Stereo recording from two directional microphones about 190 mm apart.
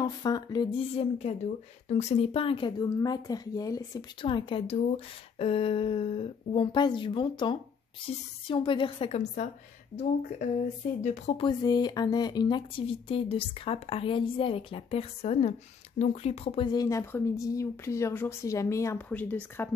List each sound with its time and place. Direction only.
0.0 s speech: 20° left (ahead or behind); by 9.5 s 35° left (ahead or behind)
11.0 s speech: 35° left (ahead or behind)
11.4 s speech: 20° left (ahead or behind)
16.6 s speech: 20° left (ahead or behind)